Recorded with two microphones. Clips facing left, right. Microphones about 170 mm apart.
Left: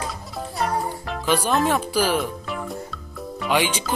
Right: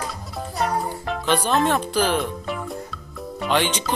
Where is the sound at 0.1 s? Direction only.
Centre (ahead or behind).